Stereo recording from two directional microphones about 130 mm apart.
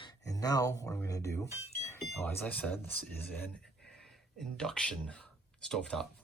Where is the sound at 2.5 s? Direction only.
10° left (ahead or behind).